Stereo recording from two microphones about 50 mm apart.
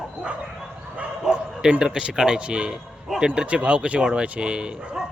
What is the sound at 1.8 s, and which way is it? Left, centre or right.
A man's voice, centre.